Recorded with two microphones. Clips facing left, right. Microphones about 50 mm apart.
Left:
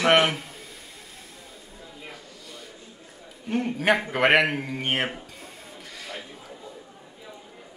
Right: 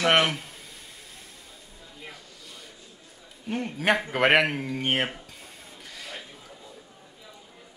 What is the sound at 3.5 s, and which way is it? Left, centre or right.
Speech, centre.